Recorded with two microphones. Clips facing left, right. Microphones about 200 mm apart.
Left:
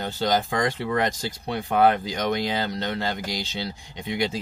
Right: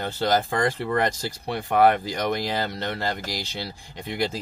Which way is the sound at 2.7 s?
20° left (ahead or behind).